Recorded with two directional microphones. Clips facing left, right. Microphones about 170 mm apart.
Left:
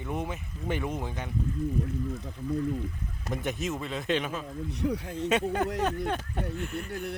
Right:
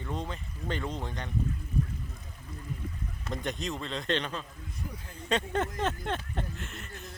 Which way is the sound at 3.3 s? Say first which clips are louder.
Left 3 dB; 5° left (ahead or behind).